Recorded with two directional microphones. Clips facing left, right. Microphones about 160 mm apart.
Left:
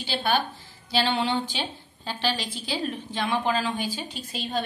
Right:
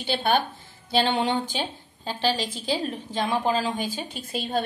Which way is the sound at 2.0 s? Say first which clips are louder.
Right 3 dB; 45° right (ahead or behind).